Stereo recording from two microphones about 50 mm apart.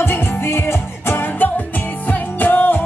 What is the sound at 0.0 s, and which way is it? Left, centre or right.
Music, left.